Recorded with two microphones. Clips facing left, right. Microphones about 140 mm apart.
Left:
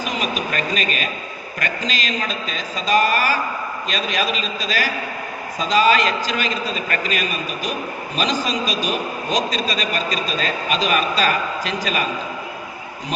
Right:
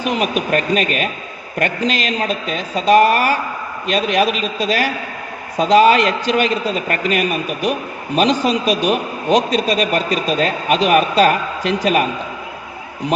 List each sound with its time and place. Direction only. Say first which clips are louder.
0.0 s a man's voice: right 5 dB; 65° right (ahead or behind)